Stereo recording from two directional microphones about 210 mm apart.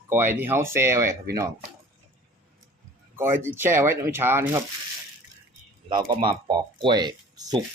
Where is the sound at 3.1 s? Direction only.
10° right (ahead or behind).